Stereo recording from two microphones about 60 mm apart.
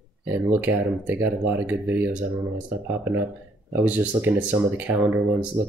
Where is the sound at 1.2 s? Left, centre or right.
Right.